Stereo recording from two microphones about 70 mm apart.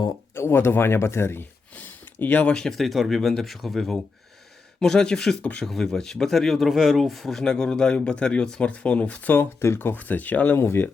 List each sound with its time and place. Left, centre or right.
0.3 s speech: left
1.7 s a sound: left
2.6 s speech: centre
5.4 s speech: left
5.6 s speech: centre
9.3 s speech: left